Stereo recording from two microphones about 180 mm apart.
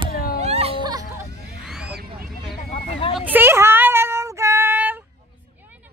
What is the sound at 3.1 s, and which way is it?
Child singing, 10° right (ahead or behind).